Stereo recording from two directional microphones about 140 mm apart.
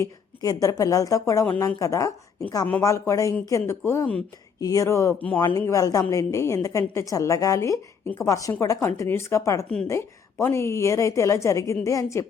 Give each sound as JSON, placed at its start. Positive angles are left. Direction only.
{"t": 0.0, "sound": "a woman's voice", "side_deg": 25}